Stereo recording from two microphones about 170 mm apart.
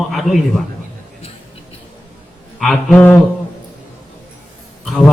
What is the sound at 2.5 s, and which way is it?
Speech, centre (ahead or behind).